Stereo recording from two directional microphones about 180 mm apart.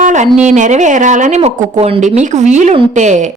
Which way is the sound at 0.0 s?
45° right (ahead or behind).